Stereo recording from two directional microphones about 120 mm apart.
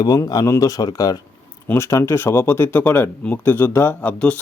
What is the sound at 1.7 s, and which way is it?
Speech, 20° left (ahead or behind).